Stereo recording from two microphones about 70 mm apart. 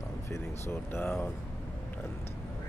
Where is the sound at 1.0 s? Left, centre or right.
Left.